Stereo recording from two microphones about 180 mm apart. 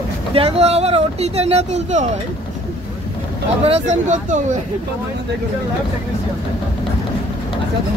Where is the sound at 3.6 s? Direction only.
35° right (ahead or behind).